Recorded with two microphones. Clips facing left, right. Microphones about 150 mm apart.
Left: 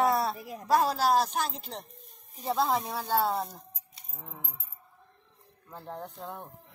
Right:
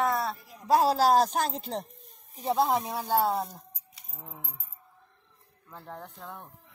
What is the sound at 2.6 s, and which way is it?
Speech, 10° right (ahead or behind).